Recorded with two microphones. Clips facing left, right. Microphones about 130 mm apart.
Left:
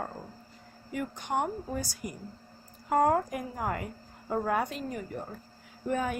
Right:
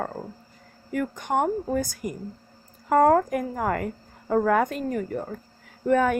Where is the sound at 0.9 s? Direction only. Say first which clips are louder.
Right 6 dB; 50° right (ahead or behind).